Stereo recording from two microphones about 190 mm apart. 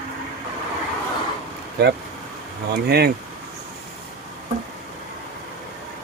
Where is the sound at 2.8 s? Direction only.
55° right (ahead or behind).